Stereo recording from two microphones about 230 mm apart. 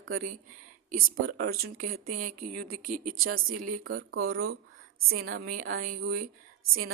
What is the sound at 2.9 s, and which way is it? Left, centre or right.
Speech, right.